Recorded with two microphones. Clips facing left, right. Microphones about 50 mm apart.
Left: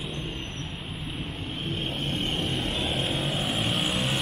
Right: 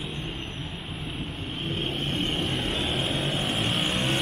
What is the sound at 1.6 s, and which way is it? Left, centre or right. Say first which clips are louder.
Vehicle: right 2 dB; right.